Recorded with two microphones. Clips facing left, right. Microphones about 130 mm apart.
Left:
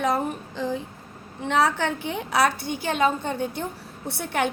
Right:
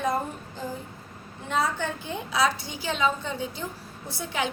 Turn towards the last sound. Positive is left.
turn(degrees=65)  # may be behind; listen again after turning